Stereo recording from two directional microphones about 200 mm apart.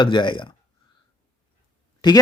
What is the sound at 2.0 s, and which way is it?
Speech, 20° left (ahead or behind).